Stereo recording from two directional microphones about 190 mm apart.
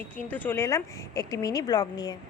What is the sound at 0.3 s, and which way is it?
A woman's voice, 10° left (ahead or behind).